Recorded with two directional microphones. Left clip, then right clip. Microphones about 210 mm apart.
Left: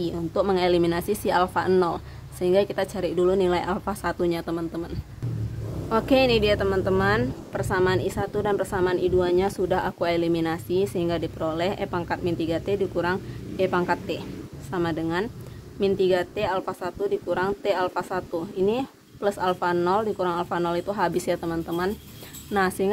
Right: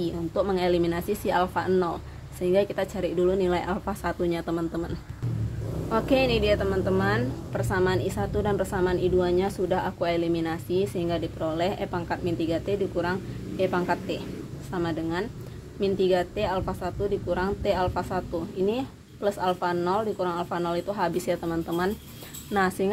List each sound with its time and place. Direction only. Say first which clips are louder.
0.0 s speech: left 2 dB; 15° left (ahead or behind)
5.9 s speech: left 3 dB; 15° left (ahead or behind)